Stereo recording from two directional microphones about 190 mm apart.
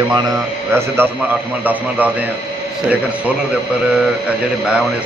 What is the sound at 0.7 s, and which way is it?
A man's voice, 10° right (ahead or behind).